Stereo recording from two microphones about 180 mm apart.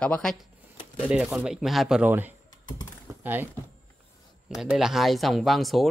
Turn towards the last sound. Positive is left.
turn(degrees=0)  # may be behind; listen again after turning